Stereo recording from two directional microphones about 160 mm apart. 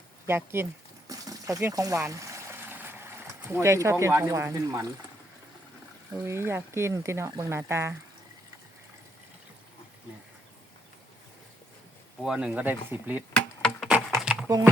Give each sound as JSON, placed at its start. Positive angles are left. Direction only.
{"t": 0.3, "sound": "a sound", "side_deg": -15}
{"t": 3.5, "sound": "speech", "side_deg": -15}
{"t": 6.1, "sound": "speech", "side_deg": -15}
{"t": 12.2, "sound": "speech", "side_deg": -5}
{"t": 13.3, "sound": "a sound", "side_deg": 5}
{"t": 14.4, "sound": "speech", "side_deg": -15}